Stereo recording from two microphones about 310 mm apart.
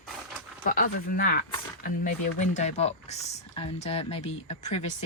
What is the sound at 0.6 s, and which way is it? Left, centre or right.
Speech, left.